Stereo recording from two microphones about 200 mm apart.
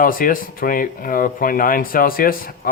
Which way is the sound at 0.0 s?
45° left (ahead or behind).